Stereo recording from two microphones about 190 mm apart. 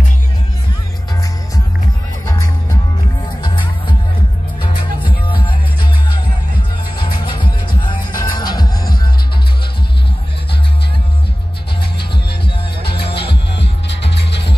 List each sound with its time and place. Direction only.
2.2 s music: 20° left (ahead or behind)
4.6 s music: 25° left (ahead or behind)
7.0 s music: 25° left (ahead or behind)
12.8 s music: 60° left (ahead or behind)